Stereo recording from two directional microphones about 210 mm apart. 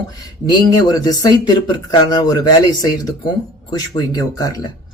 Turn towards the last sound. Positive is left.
turn(degrees=15)  # may be behind; listen again after turning